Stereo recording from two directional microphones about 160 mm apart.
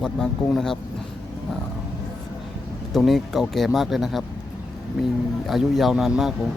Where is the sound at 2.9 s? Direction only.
Centre (ahead or behind).